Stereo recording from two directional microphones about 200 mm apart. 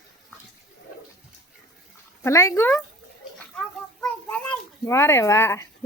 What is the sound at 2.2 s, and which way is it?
Speech, 15° left (ahead or behind).